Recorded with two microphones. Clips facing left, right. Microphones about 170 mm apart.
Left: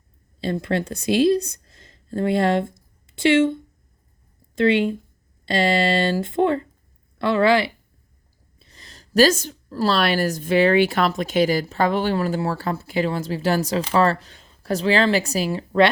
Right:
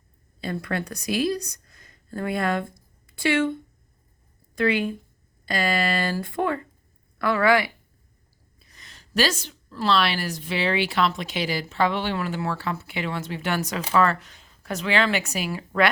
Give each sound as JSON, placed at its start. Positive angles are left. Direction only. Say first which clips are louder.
{"t": 0.3, "sound": "a woman's voice", "louder": "left 5 dB", "side_deg": 25}